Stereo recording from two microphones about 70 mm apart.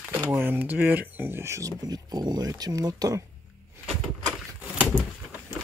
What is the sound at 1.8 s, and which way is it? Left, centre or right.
Speech, right.